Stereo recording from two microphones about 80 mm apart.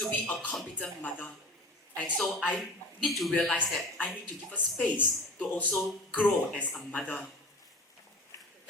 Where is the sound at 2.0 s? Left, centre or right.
Centre.